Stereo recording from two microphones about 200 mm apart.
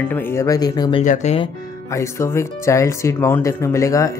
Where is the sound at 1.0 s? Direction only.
35° left (ahead or behind).